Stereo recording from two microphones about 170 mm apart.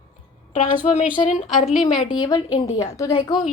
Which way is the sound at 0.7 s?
40° left (ahead or behind).